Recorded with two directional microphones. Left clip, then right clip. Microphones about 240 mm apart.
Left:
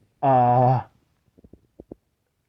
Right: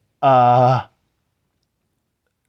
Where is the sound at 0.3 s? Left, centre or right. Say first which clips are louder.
Right 5 dB; right.